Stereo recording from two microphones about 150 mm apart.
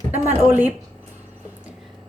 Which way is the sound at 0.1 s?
10° right (ahead or behind).